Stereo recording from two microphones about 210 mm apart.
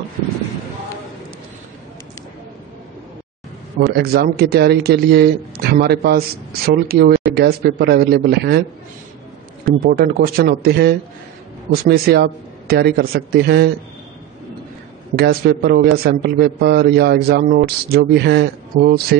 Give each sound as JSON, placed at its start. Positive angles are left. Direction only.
{"t": 3.8, "sound": "speech", "side_deg": -50}
{"t": 9.8, "sound": "speech", "side_deg": -45}
{"t": 15.1, "sound": "speech", "side_deg": -50}